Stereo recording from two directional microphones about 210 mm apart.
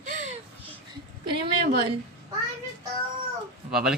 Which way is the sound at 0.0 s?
35° right (ahead or behind).